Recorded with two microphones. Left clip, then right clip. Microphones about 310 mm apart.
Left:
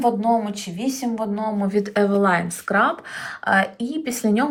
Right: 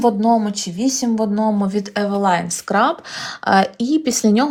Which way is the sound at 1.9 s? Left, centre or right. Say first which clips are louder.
Right 1 dB; centre.